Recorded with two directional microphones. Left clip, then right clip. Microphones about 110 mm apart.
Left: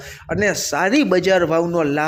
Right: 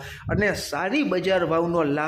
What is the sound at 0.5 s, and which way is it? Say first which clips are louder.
Speech: left 7 dB; 40° left (ahead or behind).